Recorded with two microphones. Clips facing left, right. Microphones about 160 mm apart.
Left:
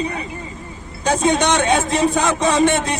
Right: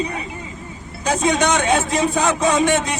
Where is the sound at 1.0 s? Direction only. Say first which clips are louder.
Left 2 dB; 30° left (ahead or behind).